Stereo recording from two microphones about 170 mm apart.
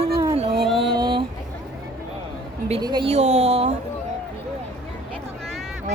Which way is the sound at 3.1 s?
40° right (ahead or behind).